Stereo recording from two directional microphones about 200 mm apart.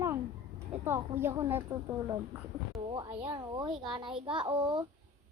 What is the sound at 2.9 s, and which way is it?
Speech, 25° right (ahead or behind).